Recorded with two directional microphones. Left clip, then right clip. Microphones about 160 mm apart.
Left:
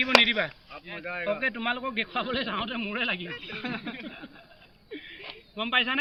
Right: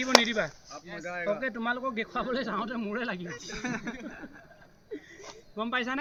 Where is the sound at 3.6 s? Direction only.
40° left (ahead or behind).